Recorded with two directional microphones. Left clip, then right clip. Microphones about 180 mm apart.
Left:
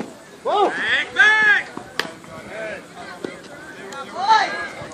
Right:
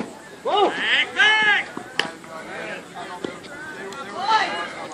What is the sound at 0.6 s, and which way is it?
Chop, 30° right (ahead or behind).